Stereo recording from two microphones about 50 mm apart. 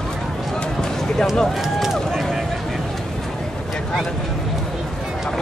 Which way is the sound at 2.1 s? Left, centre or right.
Centre.